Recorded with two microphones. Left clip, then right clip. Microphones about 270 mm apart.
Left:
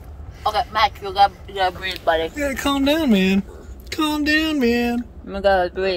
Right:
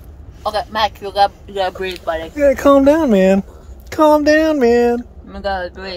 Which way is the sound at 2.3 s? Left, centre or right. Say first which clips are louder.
Right 11 dB; centre.